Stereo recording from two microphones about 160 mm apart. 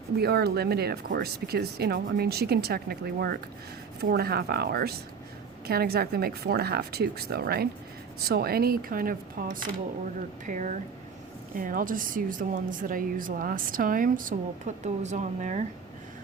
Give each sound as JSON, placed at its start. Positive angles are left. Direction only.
{"t": 0.2, "sound": "speech", "side_deg": -80}
{"t": 10.4, "sound": "a woman's voice", "side_deg": -50}